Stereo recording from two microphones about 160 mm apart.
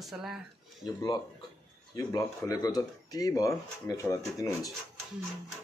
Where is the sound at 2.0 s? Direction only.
20° left (ahead or behind).